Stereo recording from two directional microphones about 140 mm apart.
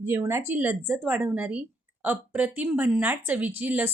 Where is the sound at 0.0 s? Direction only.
15° right (ahead or behind).